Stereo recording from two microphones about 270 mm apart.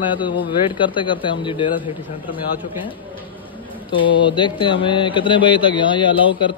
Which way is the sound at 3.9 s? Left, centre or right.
Centre.